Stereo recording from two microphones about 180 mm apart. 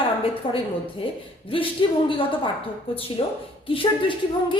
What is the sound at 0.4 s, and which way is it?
A woman's voice, 30° left (ahead or behind).